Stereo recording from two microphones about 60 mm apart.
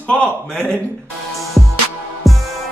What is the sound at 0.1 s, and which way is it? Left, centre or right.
Speech, centre.